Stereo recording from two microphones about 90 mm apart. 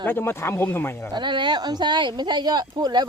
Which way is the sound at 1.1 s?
60° right (ahead or behind).